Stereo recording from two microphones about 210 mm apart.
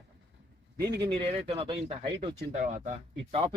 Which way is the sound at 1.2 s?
25° right (ahead or behind).